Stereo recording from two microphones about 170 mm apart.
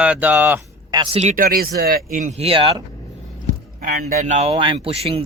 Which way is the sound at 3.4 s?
60° right (ahead or behind).